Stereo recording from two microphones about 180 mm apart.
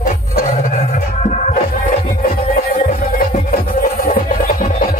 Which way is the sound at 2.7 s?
50° left (ahead or behind).